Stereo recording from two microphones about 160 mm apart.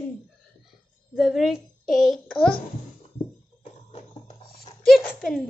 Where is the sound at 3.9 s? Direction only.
40° left (ahead or behind).